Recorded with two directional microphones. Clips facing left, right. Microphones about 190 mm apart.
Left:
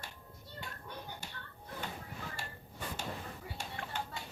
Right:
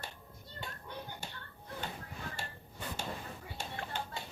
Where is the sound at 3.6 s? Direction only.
30° right (ahead or behind).